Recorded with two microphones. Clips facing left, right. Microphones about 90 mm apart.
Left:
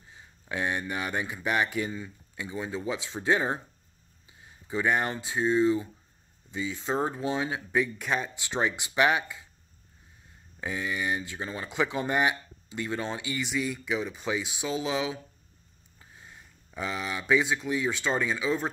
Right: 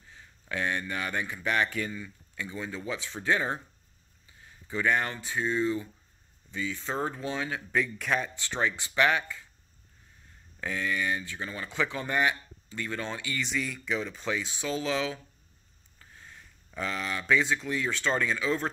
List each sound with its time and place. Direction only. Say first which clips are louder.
0.1 s speech: left 1 dB; 20° left (ahead or behind)
7.7 s speech: even; 5° left (ahead or behind)
8.4 s speech: left 1 dB; 15° left (ahead or behind)
10.6 s speech: right 1 dB; 15° left (ahead or behind)